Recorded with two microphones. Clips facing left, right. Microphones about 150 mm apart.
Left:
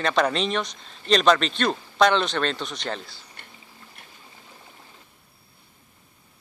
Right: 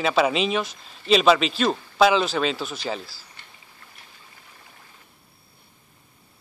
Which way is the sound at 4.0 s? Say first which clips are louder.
Left 2 dB; 55° left (ahead or behind).